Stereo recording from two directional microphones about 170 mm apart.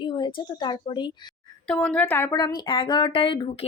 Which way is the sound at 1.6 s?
5° left (ahead or behind).